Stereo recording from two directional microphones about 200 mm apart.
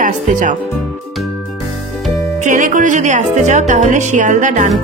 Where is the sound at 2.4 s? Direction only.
40° right (ahead or behind).